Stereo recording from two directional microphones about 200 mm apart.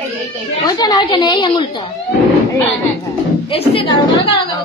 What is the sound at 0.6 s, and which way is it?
A woman's voice, 20° left (ahead or behind).